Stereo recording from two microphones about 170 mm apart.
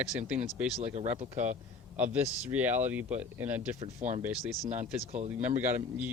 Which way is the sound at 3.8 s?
45° right (ahead or behind).